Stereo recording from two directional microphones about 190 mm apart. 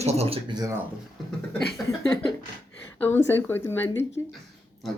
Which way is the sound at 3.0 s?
10° left (ahead or behind).